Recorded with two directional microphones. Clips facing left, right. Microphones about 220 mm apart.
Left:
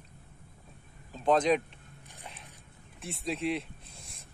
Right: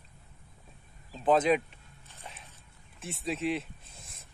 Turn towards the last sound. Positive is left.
turn(degrees=0)  # may be behind; listen again after turning